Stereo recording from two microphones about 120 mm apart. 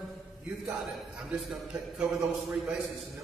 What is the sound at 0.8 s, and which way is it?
A man's voice, centre (ahead or behind).